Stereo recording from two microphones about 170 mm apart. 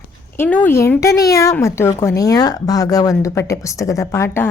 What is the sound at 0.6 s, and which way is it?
Speech, 15° left (ahead or behind).